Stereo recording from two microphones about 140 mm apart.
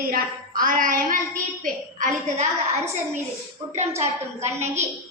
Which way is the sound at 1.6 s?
60° right (ahead or behind).